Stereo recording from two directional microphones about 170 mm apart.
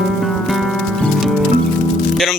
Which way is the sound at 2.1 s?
Centre (ahead or behind).